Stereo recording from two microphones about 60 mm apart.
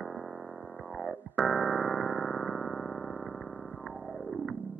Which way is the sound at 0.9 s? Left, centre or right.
Centre.